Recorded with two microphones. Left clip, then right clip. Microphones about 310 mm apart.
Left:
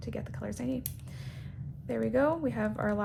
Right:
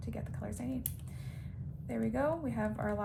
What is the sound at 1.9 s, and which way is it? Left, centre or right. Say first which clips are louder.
A woman's voice: left 6 dB; centre.